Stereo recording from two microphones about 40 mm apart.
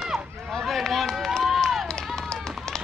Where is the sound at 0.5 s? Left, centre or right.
Centre.